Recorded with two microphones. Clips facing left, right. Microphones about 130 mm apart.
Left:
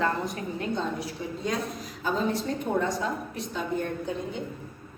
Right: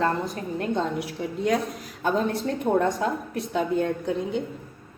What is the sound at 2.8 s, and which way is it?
A woman's voice, 60° right (ahead or behind).